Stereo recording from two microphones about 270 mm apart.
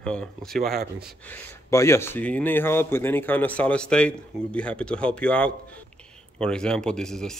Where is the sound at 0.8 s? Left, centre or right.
Right.